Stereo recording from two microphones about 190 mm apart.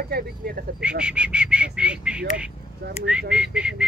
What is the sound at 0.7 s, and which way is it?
Speech, 5° right (ahead or behind).